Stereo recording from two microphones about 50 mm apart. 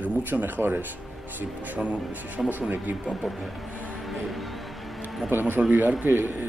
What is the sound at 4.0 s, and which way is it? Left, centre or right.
Music, centre.